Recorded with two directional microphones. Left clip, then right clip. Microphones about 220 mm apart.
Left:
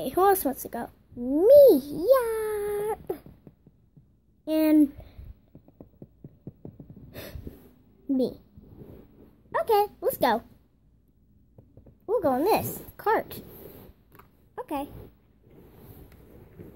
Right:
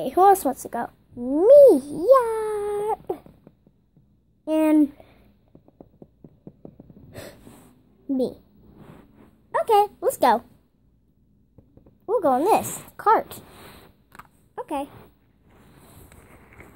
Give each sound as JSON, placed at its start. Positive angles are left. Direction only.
{"t": 0.0, "sound": "a woman's voice", "side_deg": -5}
{"t": 4.5, "sound": "a woman's voice", "side_deg": 0}
{"t": 6.6, "sound": "gasp", "side_deg": 0}
{"t": 8.1, "sound": "a woman's voice", "side_deg": 0}
{"t": 9.5, "sound": "a woman's voice", "side_deg": -5}
{"t": 12.1, "sound": "a woman's voice", "side_deg": 0}
{"t": 14.5, "sound": "a sound", "side_deg": 0}